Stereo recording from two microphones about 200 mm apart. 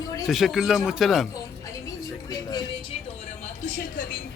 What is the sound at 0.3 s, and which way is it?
Speech, centre (ahead or behind).